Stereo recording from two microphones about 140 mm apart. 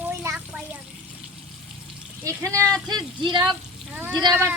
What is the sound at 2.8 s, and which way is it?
Speech, 30° right (ahead or behind).